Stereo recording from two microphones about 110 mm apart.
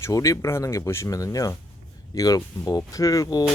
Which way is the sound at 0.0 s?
30° left (ahead or behind).